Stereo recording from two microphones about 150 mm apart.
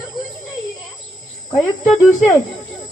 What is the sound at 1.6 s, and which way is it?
Speech, centre (ahead or behind).